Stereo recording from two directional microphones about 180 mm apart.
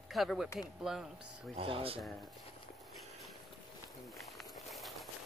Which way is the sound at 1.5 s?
30° right (ahead or behind).